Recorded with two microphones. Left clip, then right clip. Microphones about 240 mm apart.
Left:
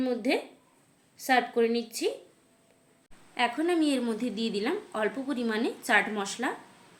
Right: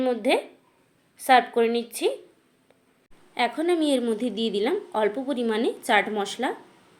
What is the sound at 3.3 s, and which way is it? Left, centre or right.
A woman's voice, centre.